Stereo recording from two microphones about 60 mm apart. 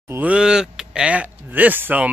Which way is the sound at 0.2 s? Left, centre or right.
Centre.